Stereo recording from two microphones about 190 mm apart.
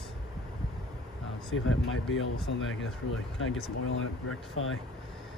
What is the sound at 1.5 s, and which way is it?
Speech, 90° left.